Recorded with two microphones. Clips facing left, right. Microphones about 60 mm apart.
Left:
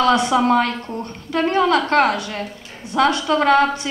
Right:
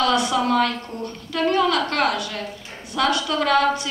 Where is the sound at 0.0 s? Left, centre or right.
Left.